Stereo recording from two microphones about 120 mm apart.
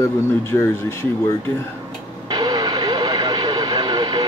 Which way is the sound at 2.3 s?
35° right (ahead or behind).